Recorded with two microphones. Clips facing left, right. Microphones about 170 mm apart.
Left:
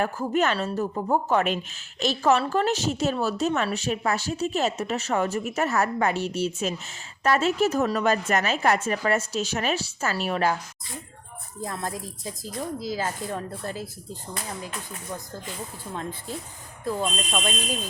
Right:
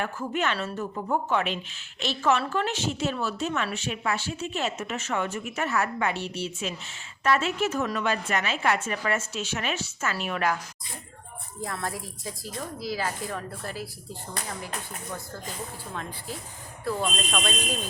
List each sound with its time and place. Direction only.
0.0 s a woman's voice: 40° left (ahead or behind)
11.6 s speech: 20° left (ahead or behind)
16.8 s speech: 20° left (ahead or behind)